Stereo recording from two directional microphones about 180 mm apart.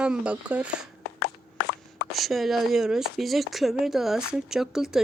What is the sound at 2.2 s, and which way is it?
Speech, centre (ahead or behind).